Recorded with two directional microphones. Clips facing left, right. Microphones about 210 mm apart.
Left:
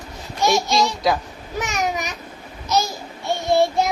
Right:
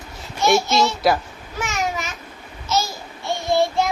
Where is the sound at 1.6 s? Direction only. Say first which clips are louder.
Left 1 dB; 20° left (ahead or behind).